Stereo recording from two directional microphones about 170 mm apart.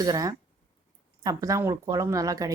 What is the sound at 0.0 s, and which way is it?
A woman's voice, 20° right (ahead or behind).